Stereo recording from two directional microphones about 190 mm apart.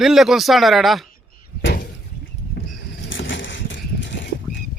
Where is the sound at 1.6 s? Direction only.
50° left (ahead or behind).